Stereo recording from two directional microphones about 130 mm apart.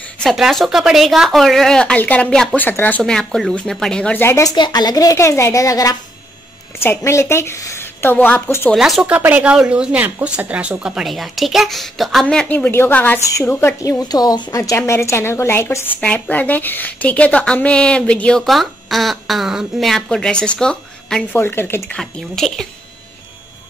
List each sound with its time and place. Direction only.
0.2 s a woman's voice: centre (ahead or behind); by 5.9 s 25° left (ahead or behind)
7.1 s a woman's voice: 20° left (ahead or behind)
8.7 s speech: centre (ahead or behind); by 14.6 s 30° left (ahead or behind)
14.6 s a woman's voice: 20° left (ahead or behind); by 21.4 s 5° left (ahead or behind)
21.4 s a woman's voice: 15° left (ahead or behind)
21.9 s speech: 5° left (ahead or behind)